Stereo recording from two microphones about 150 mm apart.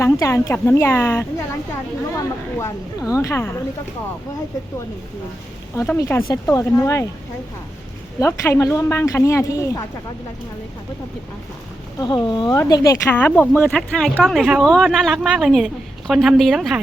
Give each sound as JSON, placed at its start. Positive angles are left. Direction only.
{"t": 0.0, "sound": "speech", "side_deg": 20}
{"t": 6.0, "sound": "speech", "side_deg": 15}
{"t": 8.2, "sound": "speech", "side_deg": 20}
{"t": 11.9, "sound": "a woman's voice", "side_deg": 30}